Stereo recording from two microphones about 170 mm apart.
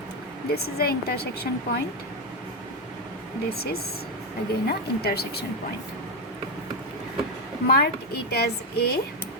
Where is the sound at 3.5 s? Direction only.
65° left (ahead or behind).